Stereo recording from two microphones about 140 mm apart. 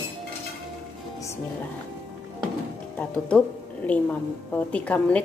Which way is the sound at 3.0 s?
10° left (ahead or behind).